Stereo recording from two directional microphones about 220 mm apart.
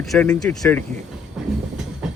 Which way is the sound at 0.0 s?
Centre (ahead or behind).